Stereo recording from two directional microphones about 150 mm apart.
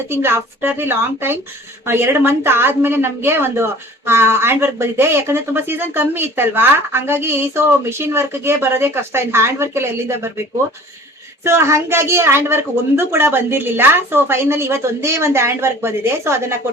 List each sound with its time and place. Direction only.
0.1 s a woman's voice: 15° right (ahead or behind)
11.4 s a woman's voice: 20° right (ahead or behind)